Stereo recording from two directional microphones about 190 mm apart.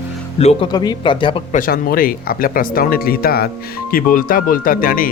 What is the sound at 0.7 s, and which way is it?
Speech, 25° left (ahead or behind).